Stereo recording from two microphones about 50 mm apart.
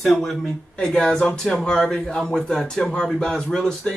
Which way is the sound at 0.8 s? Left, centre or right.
Centre.